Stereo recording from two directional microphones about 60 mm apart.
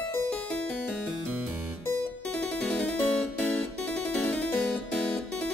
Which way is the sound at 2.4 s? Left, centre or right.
Left.